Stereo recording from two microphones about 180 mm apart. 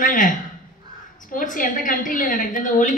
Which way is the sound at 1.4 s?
45° left (ahead or behind).